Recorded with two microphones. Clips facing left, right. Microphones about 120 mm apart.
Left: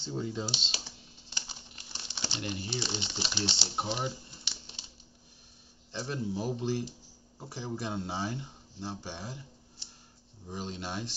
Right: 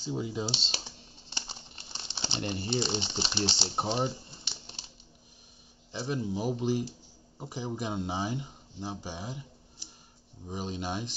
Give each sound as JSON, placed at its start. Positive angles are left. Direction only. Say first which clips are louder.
{"t": 0.0, "sound": "speech", "louder": "right 2 dB", "side_deg": -10}
{"t": 0.5, "sound": "speech", "louder": "right 3 dB", "side_deg": -35}
{"t": 1.3, "sound": "crumpling", "louder": "right 3 dB", "side_deg": -30}
{"t": 5.9, "sound": "speech", "louder": "right 2 dB", "side_deg": -10}